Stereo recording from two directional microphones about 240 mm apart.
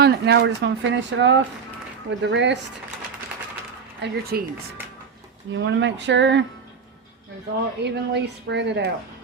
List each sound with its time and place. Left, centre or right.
0.0 s speech: right
4.0 s a woman's voice: right
5.5 s speech: right
7.9 s speech: right